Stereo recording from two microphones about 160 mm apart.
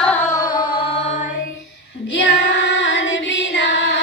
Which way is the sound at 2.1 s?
90° left.